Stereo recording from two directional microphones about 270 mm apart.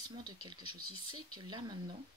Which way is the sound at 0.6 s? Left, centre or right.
Right.